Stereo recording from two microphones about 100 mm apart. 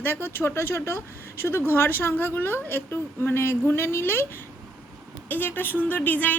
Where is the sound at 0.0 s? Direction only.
20° left (ahead or behind).